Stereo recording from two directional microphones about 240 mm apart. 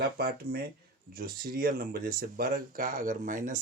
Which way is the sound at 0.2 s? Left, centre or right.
Right.